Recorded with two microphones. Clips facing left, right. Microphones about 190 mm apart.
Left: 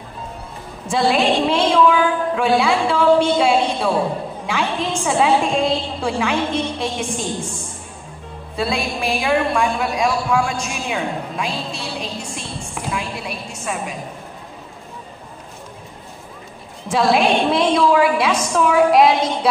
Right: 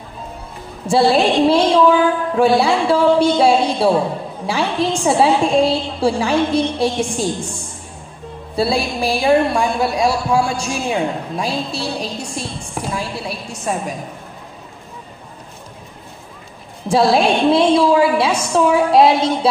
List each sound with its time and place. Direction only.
0.8 s a woman's voice: 35° right (ahead or behind)
8.5 s a woman's voice: 35° right (ahead or behind)
16.9 s a woman's voice: 35° right (ahead or behind)